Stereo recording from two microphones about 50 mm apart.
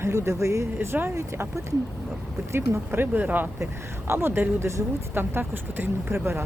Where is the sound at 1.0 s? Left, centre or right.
Right.